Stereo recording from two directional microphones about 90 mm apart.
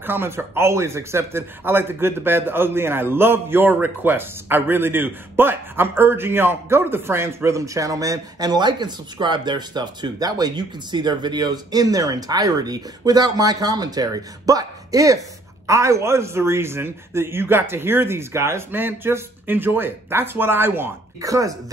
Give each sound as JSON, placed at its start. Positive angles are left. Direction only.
{"t": 0.0, "sound": "a man's voice", "side_deg": -25}
{"t": 21.2, "sound": "speech", "side_deg": -40}